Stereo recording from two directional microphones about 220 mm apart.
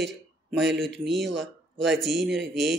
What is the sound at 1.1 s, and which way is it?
Speech, 50° right (ahead or behind).